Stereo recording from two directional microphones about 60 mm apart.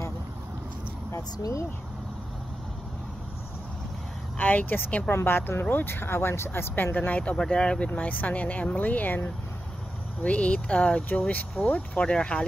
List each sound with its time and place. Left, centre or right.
1.1 s speech: left
4.4 s speech: left
5.1 s speech: left
7.3 s speech: centre
7.9 s speech: left